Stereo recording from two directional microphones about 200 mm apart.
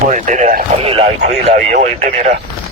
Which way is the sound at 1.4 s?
40° right (ahead or behind).